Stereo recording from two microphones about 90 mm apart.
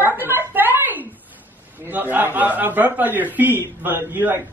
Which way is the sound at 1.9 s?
20° right (ahead or behind).